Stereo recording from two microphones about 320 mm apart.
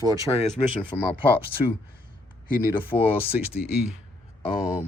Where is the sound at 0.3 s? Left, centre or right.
Centre.